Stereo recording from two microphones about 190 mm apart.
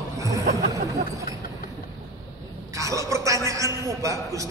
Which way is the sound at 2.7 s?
15° right (ahead or behind).